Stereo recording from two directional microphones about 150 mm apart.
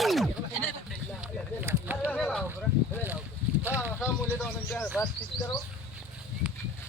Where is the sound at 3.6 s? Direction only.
10° right (ahead or behind).